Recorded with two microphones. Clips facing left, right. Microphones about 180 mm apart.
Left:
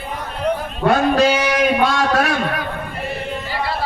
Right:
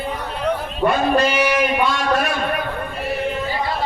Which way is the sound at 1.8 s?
90° left.